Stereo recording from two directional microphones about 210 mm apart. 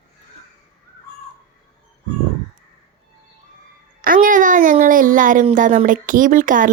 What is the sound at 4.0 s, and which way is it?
A woman's voice, 40° right (ahead or behind).